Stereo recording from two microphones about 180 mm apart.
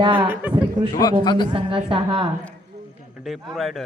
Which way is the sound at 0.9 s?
25° left (ahead or behind).